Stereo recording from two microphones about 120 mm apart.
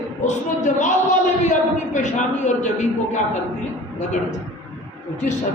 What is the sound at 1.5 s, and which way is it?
A woman's voice, 90° left.